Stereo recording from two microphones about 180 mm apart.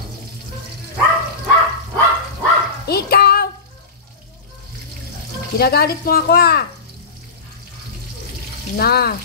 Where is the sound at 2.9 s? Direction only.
60° left (ahead or behind).